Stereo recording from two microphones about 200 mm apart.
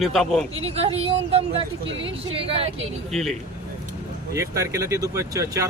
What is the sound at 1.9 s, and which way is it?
Speech, 65° right (ahead or behind).